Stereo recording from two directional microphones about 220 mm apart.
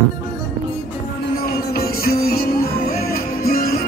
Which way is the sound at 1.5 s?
45° left (ahead or behind).